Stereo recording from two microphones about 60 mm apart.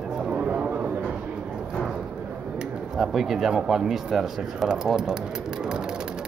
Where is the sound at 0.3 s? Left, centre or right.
Centre.